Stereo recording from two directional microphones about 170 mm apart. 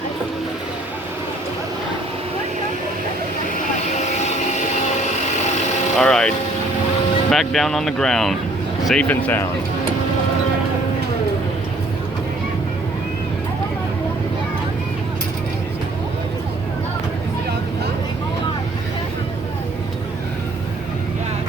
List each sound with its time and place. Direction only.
3.9 s vehicle: 45° left (ahead or behind)
6.0 s speech: 5° left (ahead or behind)